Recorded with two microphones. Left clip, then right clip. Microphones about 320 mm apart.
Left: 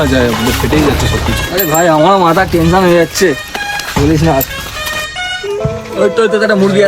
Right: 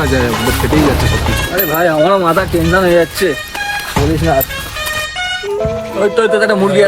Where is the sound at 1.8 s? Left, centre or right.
Left.